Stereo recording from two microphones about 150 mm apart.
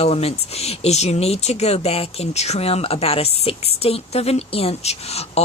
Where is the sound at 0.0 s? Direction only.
40° left (ahead or behind).